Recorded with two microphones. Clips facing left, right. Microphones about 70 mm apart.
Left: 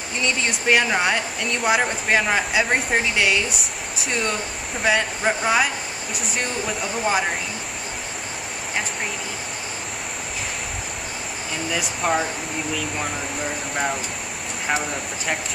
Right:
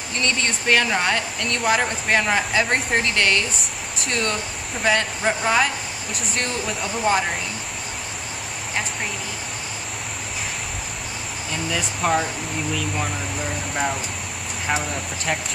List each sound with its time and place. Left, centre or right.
0.2 s speech: centre
11.7 s speech: centre
14.7 s speech: centre